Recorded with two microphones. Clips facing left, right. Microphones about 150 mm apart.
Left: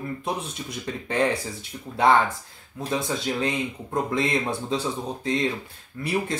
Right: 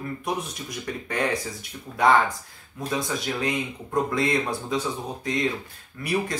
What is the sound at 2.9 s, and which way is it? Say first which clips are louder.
Speech: left 2 dB; 25° left (ahead or behind).